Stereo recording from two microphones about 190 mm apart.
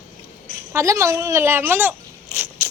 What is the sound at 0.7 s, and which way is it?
Speech, 15° right (ahead or behind).